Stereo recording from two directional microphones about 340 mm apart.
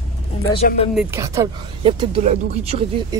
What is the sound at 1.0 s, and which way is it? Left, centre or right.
Speech, centre.